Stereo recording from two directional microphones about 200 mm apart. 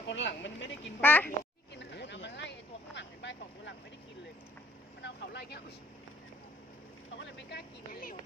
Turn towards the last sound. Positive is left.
turn(degrees=60)  # may be behind; listen again after turning